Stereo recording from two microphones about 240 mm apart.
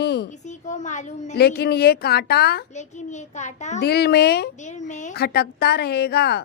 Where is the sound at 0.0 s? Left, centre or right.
Left.